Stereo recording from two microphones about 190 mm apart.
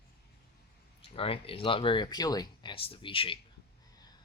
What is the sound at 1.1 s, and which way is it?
Speech, 30° left (ahead or behind).